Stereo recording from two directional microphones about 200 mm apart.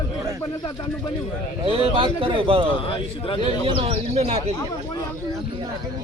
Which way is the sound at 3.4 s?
30° right (ahead or behind).